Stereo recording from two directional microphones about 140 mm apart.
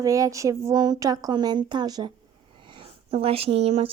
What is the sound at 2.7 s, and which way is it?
Speech, 40° right (ahead or behind).